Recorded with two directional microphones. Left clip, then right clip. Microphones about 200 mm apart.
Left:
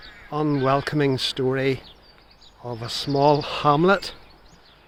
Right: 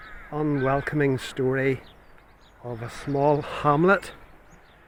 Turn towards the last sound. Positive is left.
turn(degrees=5)  # may be behind; listen again after turning